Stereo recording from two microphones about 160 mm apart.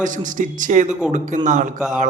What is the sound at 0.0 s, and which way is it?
A man's voice, 55° right (ahead or behind).